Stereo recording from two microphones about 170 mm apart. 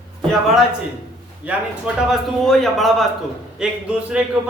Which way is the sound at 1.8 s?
Centre (ahead or behind).